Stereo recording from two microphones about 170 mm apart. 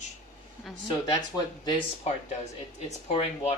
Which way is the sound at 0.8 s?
20° left (ahead or behind).